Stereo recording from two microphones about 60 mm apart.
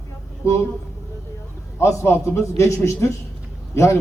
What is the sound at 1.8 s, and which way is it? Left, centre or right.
A man's voice, left.